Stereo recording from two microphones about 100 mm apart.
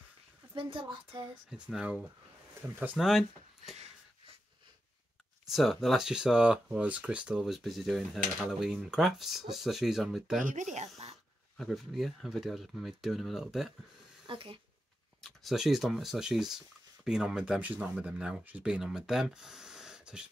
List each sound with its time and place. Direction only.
0.6 s a woman's voice: 60° right (ahead or behind)
1.5 s speech: 5° right (ahead or behind)
2.6 s speech: 25° right (ahead or behind)
3.0 s speech: 5° right (ahead or behind)
5.5 s speech: centre (ahead or behind)
11.0 s a sound: 90° right
11.5 s speech: centre (ahead or behind)
14.2 s speech: 60° right (ahead or behind)
15.2 s speech: centre (ahead or behind)